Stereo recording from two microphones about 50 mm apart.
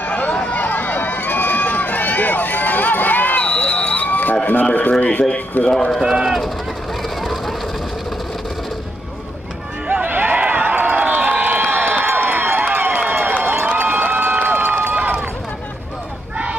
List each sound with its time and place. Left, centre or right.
0.0 s run: left
5.6 s speech: centre
5.9 s speech: centre
7.2 s a sound: centre
9.8 s a sound: right
13.7 s crowd: right